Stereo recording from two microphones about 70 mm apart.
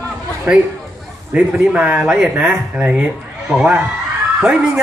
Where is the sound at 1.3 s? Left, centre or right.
Centre.